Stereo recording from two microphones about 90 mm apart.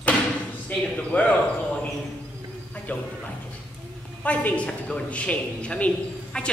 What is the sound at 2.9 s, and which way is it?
Speech, 15° left (ahead or behind).